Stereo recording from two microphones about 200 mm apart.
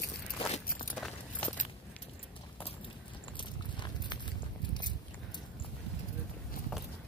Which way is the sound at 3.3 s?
25° left (ahead or behind).